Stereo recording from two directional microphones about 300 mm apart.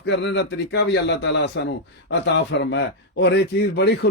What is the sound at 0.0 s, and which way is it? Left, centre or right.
A man's voice, left.